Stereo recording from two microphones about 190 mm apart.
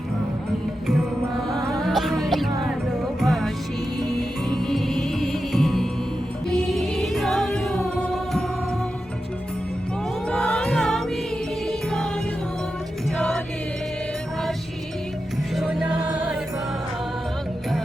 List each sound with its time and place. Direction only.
1.8 s music: centre (ahead or behind)
10.2 s music: 5° left (ahead or behind)
13.1 s music: 5° left (ahead or behind)
15.5 s music: centre (ahead or behind)